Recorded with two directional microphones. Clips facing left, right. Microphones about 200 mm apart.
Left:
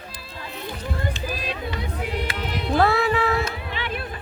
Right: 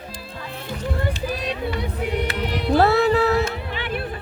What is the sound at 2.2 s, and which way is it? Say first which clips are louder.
Music: right 4 dB; 65° right (ahead or behind).